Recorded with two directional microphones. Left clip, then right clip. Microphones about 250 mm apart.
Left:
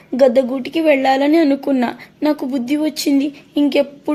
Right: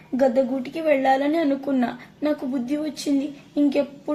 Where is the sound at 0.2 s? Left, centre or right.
Left.